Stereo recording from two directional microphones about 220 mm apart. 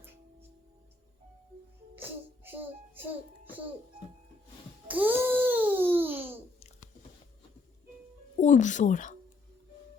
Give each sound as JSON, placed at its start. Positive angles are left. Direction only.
{"t": 2.0, "sound": "music", "side_deg": -10}
{"t": 4.9, "sound": "babbling", "side_deg": -10}
{"t": 8.4, "sound": "a woman's voice", "side_deg": 35}